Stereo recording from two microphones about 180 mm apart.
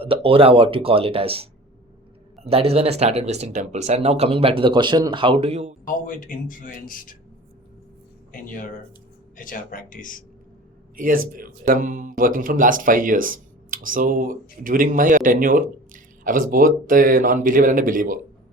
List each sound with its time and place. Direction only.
0.0 s speech: 30° right (ahead or behind)
2.5 s speech: 35° right (ahead or behind)
5.8 s speech: 50° left (ahead or behind)
8.3 s speech: 50° left (ahead or behind)
10.9 s speech: 50° right (ahead or behind)